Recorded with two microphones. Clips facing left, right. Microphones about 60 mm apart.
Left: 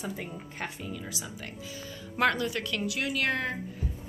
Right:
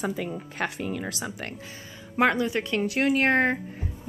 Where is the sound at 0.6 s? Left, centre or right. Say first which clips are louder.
Right 8 dB; right.